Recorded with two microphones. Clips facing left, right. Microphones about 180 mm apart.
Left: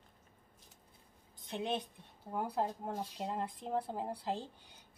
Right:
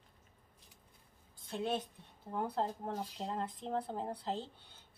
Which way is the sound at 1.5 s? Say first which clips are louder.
Right 1 dB; 20° left (ahead or behind).